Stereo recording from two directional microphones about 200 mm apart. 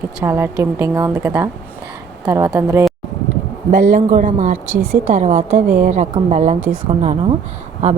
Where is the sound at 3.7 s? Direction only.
40° right (ahead or behind).